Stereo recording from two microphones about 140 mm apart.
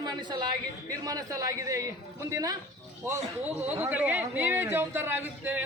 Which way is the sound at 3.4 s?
10° right (ahead or behind).